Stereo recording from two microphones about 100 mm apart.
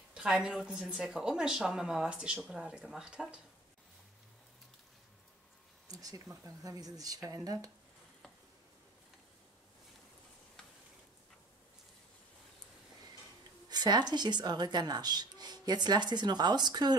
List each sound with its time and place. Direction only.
0.1 s speech: 10° right (ahead or behind)
5.9 s speech: 35° right (ahead or behind)
13.7 s a sound: 45° right (ahead or behind)
14.1 s speech: 45° right (ahead or behind)